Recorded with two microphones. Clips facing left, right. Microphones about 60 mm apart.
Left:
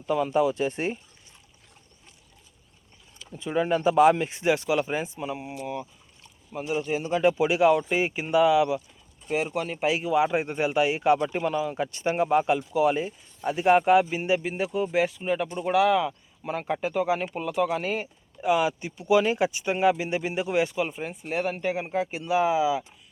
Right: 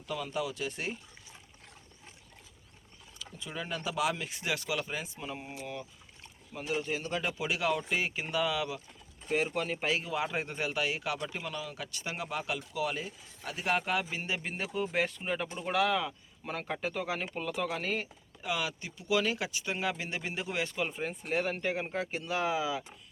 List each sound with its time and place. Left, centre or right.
0.0 s speech: left
3.2 s speech: left
5.2 s a man's voice: centre
9.3 s speech: centre
9.8 s a man's voice: centre
14.4 s speech: centre